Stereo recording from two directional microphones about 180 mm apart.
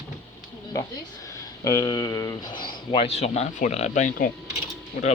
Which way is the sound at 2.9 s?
35° left (ahead or behind).